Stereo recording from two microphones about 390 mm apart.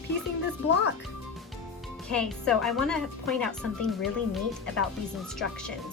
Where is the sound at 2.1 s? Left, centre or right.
Centre.